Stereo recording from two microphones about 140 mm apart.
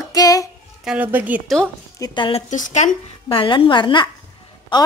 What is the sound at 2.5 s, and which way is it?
Speech, 65° left (ahead or behind).